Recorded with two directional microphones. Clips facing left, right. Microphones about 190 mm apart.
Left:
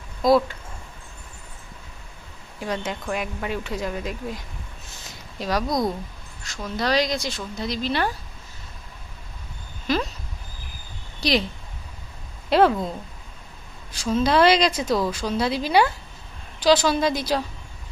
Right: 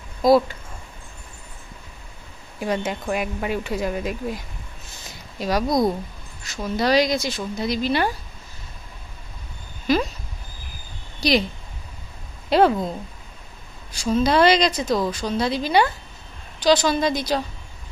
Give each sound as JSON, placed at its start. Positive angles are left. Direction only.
{"t": 0.2, "sound": "speech", "side_deg": 0}
{"t": 2.6, "sound": "speech", "side_deg": -10}
{"t": 5.4, "sound": "speech", "side_deg": -5}
{"t": 5.7, "sound": "speech", "side_deg": -25}
{"t": 6.4, "sound": "speech", "side_deg": -5}
{"t": 11.1, "sound": "a sound", "side_deg": 0}
{"t": 12.4, "sound": "speech", "side_deg": 0}
{"t": 14.1, "sound": "speech", "side_deg": 0}